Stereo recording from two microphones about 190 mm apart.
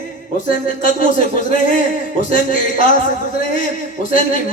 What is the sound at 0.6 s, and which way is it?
Speech, 45° left (ahead or behind).